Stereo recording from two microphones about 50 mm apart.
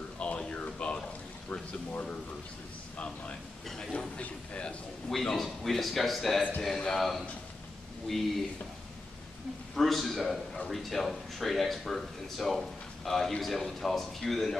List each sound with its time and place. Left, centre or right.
0.2 s a sound: left
1.5 s speech: left
3.6 s speech: centre
5.1 s speech: centre
9.8 s speech: centre